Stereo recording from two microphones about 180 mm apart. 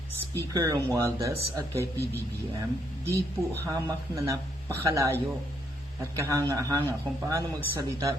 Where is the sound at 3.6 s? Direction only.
15° right (ahead or behind).